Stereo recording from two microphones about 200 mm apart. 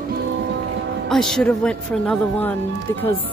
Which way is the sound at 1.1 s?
Centre (ahead or behind).